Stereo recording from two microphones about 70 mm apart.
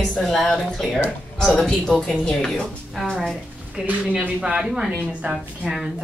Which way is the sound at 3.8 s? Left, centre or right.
Right.